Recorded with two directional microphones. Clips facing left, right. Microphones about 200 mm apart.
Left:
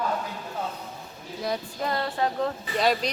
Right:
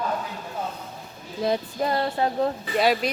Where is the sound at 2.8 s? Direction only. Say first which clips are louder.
Right 2 dB; 5° right (ahead or behind).